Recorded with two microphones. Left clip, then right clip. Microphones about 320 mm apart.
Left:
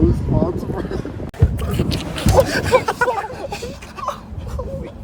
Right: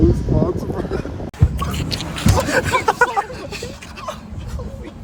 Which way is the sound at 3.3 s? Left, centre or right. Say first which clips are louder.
Left 2 dB; left.